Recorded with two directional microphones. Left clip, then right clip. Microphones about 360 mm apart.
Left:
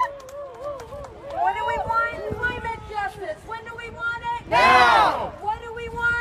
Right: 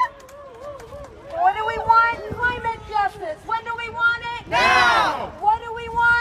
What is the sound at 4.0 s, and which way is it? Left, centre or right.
Vehicle, centre.